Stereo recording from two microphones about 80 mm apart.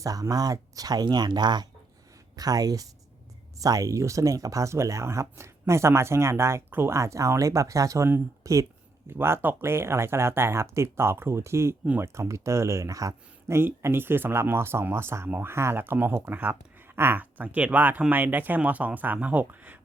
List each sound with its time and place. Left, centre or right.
0.0 s speech: right
2.3 s speech: right
13.6 s speech: right